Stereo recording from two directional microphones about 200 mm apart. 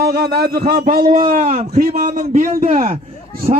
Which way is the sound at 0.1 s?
50° right (ahead or behind).